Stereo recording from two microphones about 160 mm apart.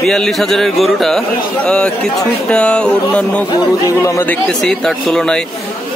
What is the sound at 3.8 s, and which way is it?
Speech, 20° left (ahead or behind).